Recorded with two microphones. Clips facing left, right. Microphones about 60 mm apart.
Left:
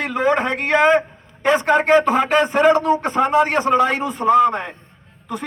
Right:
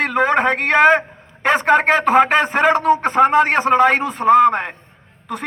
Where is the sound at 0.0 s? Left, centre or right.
Right.